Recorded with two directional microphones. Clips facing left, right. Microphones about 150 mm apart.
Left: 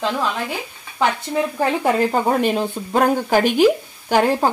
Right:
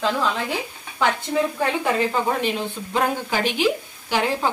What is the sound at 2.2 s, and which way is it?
Speech, 45° left (ahead or behind).